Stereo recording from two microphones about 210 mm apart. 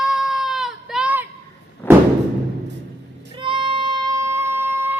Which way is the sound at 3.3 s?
25° right (ahead or behind).